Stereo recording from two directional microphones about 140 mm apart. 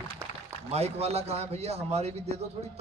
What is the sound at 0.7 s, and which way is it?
A man's voice, 50° right (ahead or behind).